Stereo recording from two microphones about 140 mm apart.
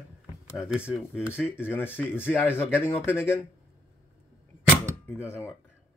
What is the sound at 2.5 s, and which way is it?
Speech, 15° left (ahead or behind).